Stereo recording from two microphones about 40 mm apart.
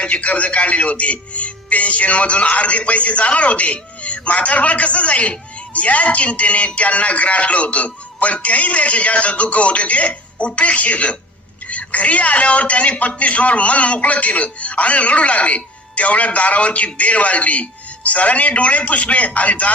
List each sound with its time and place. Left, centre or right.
0.0 s a man's voice: left